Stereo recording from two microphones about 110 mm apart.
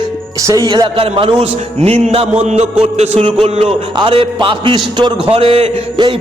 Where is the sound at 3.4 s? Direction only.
60° right (ahead or behind).